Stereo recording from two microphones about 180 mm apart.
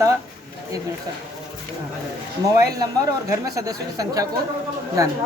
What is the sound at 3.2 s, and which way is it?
A woman's voice, 20° right (ahead or behind).